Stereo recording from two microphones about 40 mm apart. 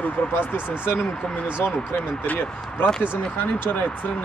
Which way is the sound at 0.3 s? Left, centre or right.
Left.